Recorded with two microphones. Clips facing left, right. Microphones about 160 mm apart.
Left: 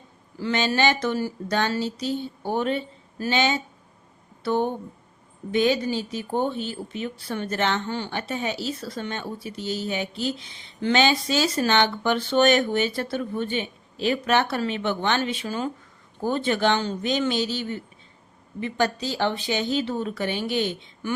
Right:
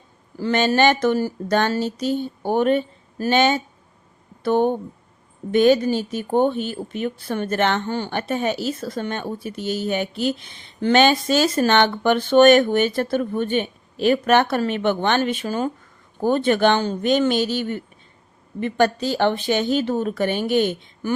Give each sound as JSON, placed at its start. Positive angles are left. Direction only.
{"t": 0.3, "sound": "a woman's voice", "side_deg": -45}